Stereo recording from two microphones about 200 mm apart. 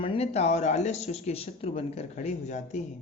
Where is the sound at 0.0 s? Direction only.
30° left (ahead or behind).